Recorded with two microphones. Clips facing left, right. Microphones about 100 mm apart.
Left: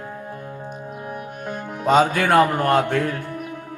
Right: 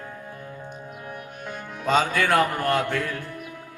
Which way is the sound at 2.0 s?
50° left (ahead or behind).